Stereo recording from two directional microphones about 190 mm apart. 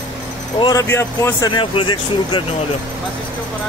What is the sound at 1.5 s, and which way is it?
Speech, 25° left (ahead or behind).